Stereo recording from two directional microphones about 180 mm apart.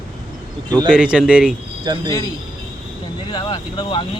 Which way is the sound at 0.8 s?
5° right (ahead or behind).